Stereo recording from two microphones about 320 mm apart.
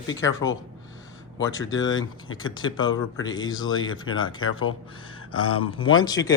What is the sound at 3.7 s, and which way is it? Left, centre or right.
Speech, left.